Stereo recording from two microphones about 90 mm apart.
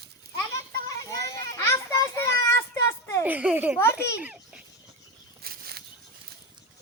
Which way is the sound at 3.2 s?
15° right (ahead or behind).